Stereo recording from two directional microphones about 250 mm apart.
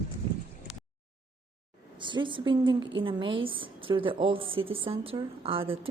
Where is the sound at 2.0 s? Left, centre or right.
Centre.